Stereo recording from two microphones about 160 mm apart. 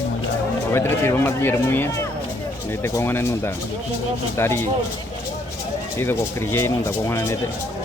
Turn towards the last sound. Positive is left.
turn(degrees=15)  # may be behind; listen again after turning